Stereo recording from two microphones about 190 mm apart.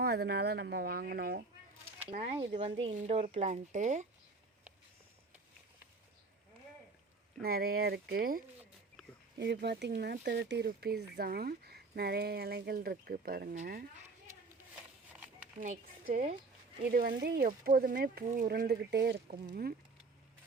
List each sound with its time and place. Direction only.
0.0 s speech: 55° right (ahead or behind)
2.0 s speech: 30° right (ahead or behind)
7.4 s speech: 55° right (ahead or behind)
9.4 s speech: 60° right (ahead or behind)
15.6 s speech: 45° right (ahead or behind)
16.8 s speech: 50° right (ahead or behind)